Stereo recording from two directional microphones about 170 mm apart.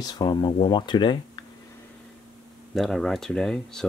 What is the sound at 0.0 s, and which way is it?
Speech, 25° left (ahead or behind).